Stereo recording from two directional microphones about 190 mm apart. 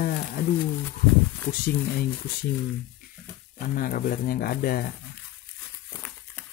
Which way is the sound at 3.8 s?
50° left (ahead or behind).